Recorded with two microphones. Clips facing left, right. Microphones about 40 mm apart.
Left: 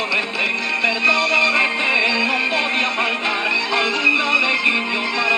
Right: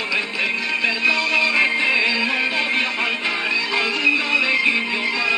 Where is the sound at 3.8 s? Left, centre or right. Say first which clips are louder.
Left 2 dB; left.